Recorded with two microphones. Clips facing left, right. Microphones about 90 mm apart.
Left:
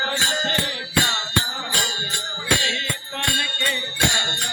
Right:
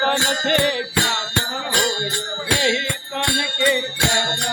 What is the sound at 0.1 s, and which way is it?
Music, 90° right.